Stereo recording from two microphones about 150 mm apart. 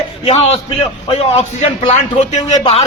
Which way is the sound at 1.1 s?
45° left (ahead or behind).